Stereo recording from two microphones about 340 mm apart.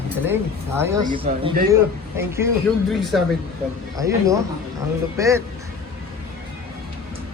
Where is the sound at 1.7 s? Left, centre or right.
Centre.